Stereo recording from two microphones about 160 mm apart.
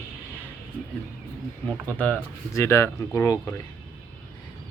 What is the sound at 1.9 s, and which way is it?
Speech, 10° left (ahead or behind).